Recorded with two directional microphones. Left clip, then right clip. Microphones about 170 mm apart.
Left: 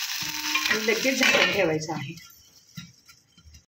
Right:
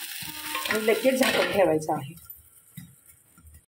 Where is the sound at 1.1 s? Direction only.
10° right (ahead or behind).